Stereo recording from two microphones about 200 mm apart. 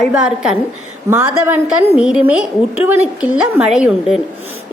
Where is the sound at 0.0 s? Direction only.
5° right (ahead or behind).